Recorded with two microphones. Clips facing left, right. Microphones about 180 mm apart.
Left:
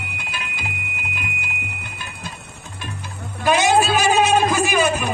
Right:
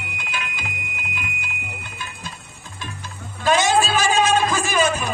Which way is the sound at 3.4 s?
15° left (ahead or behind).